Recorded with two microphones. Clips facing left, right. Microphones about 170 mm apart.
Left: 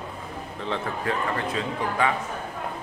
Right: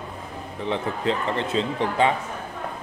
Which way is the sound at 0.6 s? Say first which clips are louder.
Right 4 dB; 20° right (ahead or behind).